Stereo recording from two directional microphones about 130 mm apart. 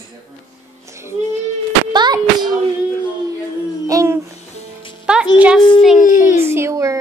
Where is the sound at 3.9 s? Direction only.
25° right (ahead or behind).